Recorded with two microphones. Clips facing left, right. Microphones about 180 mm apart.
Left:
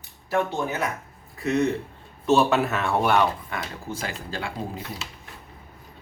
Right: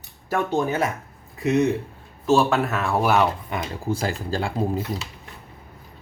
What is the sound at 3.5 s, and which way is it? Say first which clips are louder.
Speech: right 4 dB; 20° right (ahead or behind).